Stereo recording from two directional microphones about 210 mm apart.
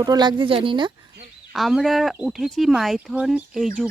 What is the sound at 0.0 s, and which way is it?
Speech, 20° right (ahead or behind).